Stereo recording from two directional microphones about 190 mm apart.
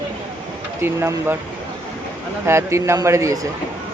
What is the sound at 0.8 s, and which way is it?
Speech, 15° right (ahead or behind).